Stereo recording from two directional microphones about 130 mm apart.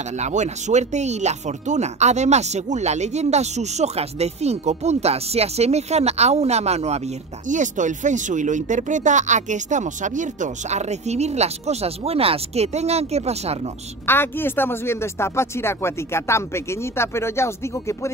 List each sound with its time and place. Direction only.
0.2 s speech: 65° right (ahead or behind)
7.4 s speech: 75° right (ahead or behind); by 13.6 s 55° right (ahead or behind)
14.0 s speech: 15° left (ahead or behind)